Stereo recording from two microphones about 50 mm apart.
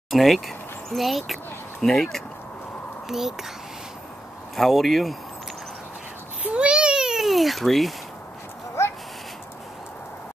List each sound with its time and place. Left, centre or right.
0.1 s speech: centre
3.1 s speech: centre
4.6 s speech: centre
6.4 s babbling: right
7.2 s speech: centre